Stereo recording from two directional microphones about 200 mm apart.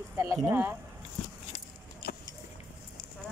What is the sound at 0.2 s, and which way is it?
Speech, 10° right (ahead or behind).